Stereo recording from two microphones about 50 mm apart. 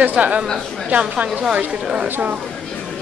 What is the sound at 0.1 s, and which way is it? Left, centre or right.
A woman's voice, right.